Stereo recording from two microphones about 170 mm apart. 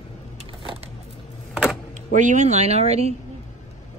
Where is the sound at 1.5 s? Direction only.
5° right (ahead or behind).